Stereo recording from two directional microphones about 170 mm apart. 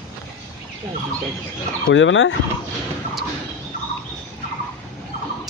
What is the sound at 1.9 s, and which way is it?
Speech, 90° left.